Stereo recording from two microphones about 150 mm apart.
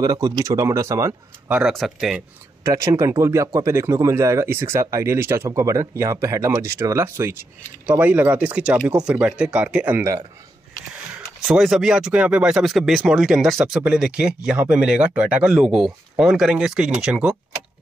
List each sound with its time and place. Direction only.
0.0 s speech: 25° right (ahead or behind)
1.5 s speech: centre (ahead or behind)
2.6 s speech: 20° right (ahead or behind)
11.4 s speech: centre (ahead or behind)